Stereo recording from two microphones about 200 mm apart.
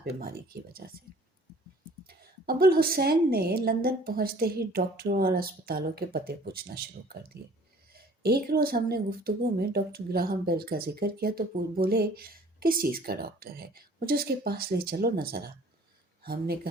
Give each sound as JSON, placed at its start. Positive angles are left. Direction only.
{"t": 0.0, "sound": "speech", "side_deg": -50}
{"t": 2.0, "sound": "speech", "side_deg": -50}